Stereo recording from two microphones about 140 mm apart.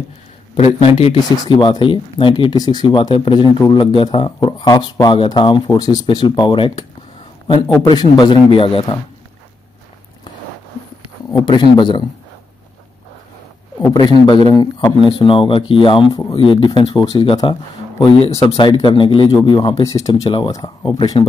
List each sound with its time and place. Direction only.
0.6 s a man's voice: 45° left (ahead or behind)
1.3 s speech: 30° left (ahead or behind)
11.3 s speech: 35° left (ahead or behind)
14.5 s speech: 30° left (ahead or behind)
20.2 s speech: 35° left (ahead or behind)